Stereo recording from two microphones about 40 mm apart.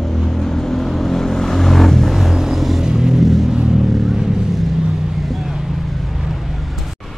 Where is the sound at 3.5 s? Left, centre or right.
Centre.